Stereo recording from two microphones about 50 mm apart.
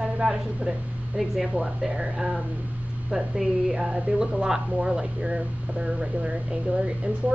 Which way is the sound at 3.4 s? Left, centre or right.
Centre.